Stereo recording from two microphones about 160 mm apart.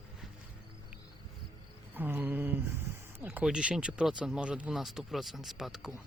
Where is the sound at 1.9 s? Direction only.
10° right (ahead or behind).